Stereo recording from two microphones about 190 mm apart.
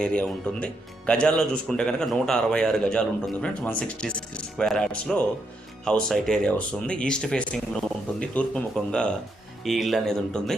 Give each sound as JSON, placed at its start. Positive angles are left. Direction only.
{"t": 0.0, "sound": "speech", "side_deg": 5}